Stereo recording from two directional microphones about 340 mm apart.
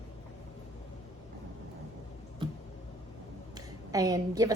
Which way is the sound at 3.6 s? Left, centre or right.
Centre.